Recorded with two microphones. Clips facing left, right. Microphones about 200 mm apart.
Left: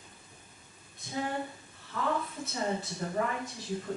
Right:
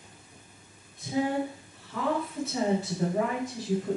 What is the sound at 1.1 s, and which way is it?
A woman's voice, 5° right (ahead or behind).